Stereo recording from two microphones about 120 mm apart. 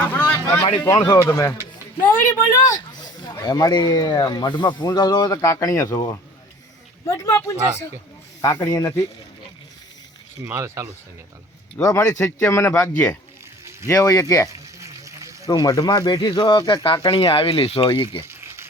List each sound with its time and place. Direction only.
0.0 s a sound: 10° left (ahead or behind)
1.0 s speech: 30° left (ahead or behind)
10.4 s speech: 20° right (ahead or behind)
11.8 s speech: 25° left (ahead or behind)
14.5 s frying: 25° right (ahead or behind)
15.4 s speech: 35° left (ahead or behind); by 18.2 s 50° left (ahead or behind)
18.3 s a sound: 20° right (ahead or behind)